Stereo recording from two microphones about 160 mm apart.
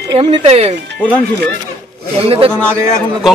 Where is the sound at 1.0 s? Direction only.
10° left (ahead or behind).